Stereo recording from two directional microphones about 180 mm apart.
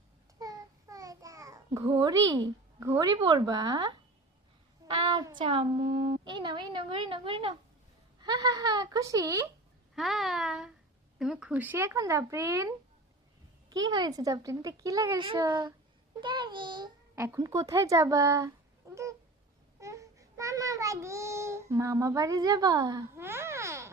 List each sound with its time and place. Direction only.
0.3 s babbling: 20° right (ahead or behind)
3.2 s a woman's voice: 25° right (ahead or behind)
9.9 s speech: centre (ahead or behind); by 12.7 s 20° right (ahead or behind)
13.9 s a woman's voice: 20° right (ahead or behind)
17.2 s speech: 15° right (ahead or behind)
19.8 s child singing: 15° right (ahead or behind)